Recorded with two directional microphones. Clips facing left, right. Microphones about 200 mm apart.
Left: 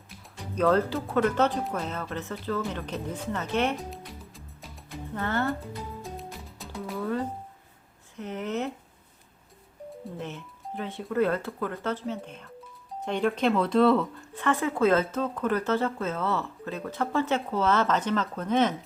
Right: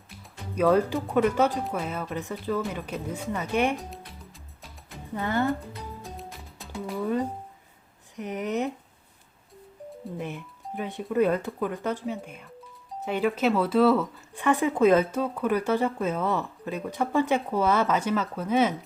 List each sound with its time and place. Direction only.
0.5 s speech: 10° right (ahead or behind)
5.1 s speech: 15° right (ahead or behind)
6.0 s music: centre (ahead or behind)
7.0 s speech: 15° right (ahead or behind)
10.2 s speech: 15° right (ahead or behind)